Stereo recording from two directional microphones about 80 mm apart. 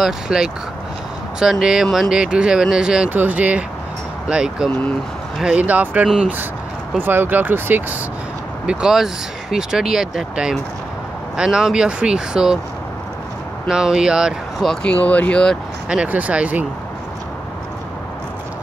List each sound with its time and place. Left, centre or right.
0.0 s speech: centre
3.1 s speech: right
7.0 s speech: right
8.6 s speech: centre
13.7 s speech: centre
14.6 s speech: centre
15.9 s speech: centre